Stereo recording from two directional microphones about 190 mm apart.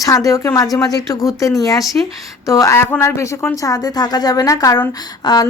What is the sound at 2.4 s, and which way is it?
Speech, 15° left (ahead or behind).